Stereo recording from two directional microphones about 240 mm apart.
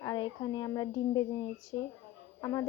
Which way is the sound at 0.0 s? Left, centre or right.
Centre.